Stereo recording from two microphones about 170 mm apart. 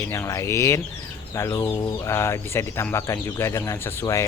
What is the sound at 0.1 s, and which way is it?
Speech, 15° left (ahead or behind).